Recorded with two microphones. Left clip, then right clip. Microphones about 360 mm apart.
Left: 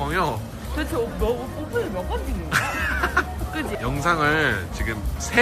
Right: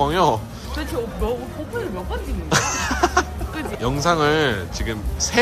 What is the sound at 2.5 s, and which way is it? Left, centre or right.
Speech, centre.